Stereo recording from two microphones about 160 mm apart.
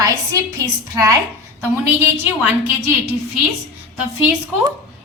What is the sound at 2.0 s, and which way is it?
Speech, 15° right (ahead or behind).